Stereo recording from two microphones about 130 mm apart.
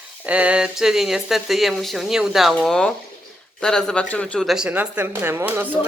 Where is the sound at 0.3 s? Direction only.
10° right (ahead or behind); by 4.4 s 10° left (ahead or behind).